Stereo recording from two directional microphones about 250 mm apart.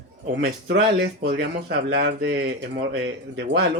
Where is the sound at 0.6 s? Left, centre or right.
Right.